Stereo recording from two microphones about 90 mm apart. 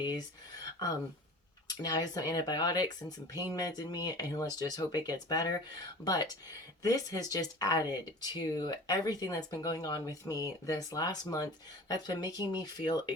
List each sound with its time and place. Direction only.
1.6 s speech: 50° left (ahead or behind)